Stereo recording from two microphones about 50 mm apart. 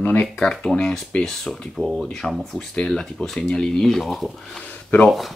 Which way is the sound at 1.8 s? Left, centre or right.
Centre.